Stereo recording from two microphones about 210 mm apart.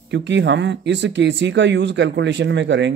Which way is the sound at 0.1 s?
55° right (ahead or behind).